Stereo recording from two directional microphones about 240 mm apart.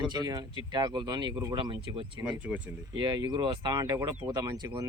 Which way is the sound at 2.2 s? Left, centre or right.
Centre.